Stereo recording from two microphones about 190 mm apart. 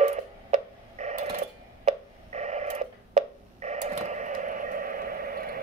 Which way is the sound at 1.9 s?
35° right (ahead or behind).